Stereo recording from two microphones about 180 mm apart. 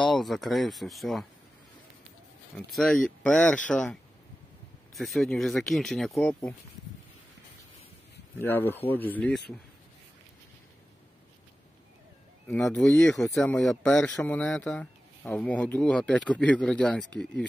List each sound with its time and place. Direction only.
0.0 s speech: centre (ahead or behind)
2.5 s speech: centre (ahead or behind)
8.4 s speech: 10° left (ahead or behind)
9.5 s speech: 25° left (ahead or behind)
12.4 s speech: 5° left (ahead or behind)